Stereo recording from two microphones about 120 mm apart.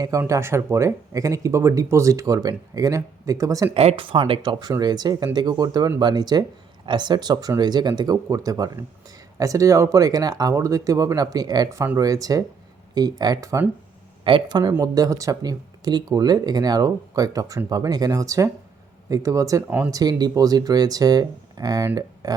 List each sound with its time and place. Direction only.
0.2 s speech: 20° right (ahead or behind)
3.8 s speech: 55° right (ahead or behind); by 13.7 s 25° right (ahead or behind)
14.3 s speech: 40° right (ahead or behind)